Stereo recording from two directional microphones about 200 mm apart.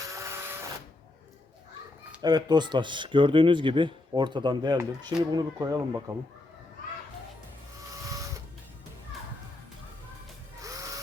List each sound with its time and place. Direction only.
0.1 s printer: 15° right (ahead or behind)
2.2 s speech: 20° right (ahead or behind)
10.6 s a sound: 15° right (ahead or behind)